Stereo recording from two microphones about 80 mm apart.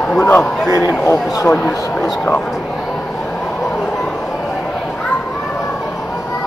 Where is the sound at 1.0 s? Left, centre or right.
Left.